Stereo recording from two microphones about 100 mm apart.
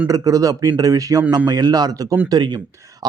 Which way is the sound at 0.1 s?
35° right (ahead or behind).